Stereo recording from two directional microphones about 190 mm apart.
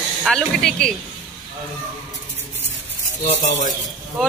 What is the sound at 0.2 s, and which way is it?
Speech, centre (ahead or behind).